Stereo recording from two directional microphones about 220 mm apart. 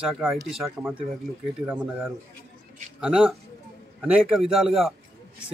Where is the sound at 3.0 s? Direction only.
5° right (ahead or behind).